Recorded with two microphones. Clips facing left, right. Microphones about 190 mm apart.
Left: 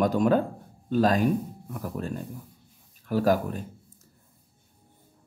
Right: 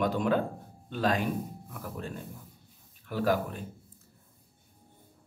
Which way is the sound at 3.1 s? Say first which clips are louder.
Left 5 dB; 40° left (ahead or behind).